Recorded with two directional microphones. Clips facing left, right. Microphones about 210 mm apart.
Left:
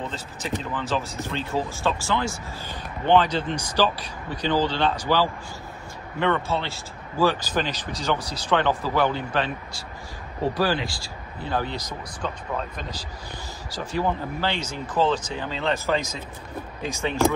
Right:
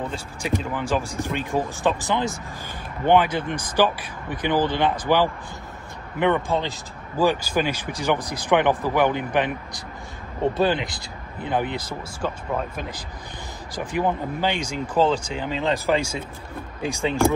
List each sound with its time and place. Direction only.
0.0 s speech: 10° right (ahead or behind)
6.1 s speech: 15° right (ahead or behind)
12.2 s speech: 10° right (ahead or behind)